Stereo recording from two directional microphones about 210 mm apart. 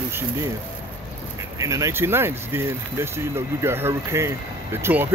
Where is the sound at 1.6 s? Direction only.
15° right (ahead or behind).